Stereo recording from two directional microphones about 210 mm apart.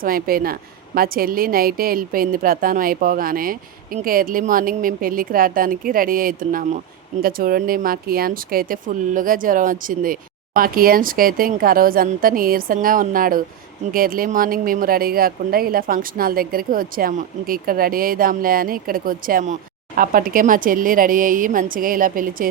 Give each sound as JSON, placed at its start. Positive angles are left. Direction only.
{"t": 0.0, "sound": "speech", "side_deg": -45}